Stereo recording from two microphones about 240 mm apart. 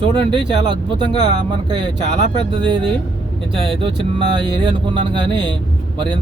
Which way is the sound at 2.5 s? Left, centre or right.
Right.